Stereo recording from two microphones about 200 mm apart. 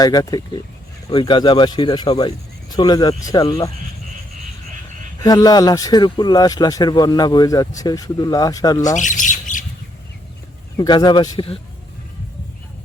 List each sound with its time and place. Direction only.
0.0 s a man's voice: 20° left (ahead or behind)
5.2 s a man's voice: 20° left (ahead or behind)
9.0 s squawk: 40° left (ahead or behind)
10.8 s a man's voice: 20° left (ahead or behind)